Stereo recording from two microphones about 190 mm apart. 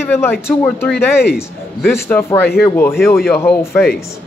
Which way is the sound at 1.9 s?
10° left (ahead or behind).